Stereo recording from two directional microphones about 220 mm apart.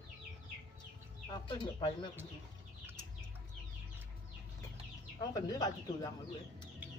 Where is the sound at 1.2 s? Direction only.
20° left (ahead or behind).